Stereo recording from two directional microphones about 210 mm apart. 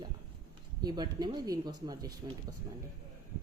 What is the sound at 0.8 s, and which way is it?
Speech, 20° right (ahead or behind).